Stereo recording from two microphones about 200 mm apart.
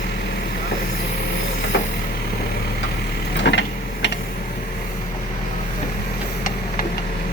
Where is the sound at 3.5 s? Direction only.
60° left (ahead or behind).